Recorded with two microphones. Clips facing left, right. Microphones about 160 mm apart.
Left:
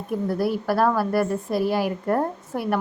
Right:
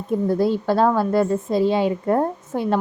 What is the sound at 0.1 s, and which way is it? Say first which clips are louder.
A woman's voice: right 4 dB; 20° right (ahead or behind).